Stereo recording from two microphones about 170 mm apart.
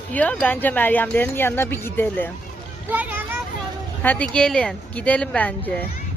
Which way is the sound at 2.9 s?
10° right (ahead or behind).